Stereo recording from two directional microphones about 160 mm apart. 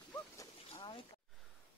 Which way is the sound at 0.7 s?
30° left (ahead or behind).